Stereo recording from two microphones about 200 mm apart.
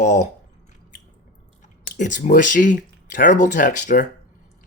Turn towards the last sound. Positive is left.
turn(degrees=40)  # may be behind; listen again after turning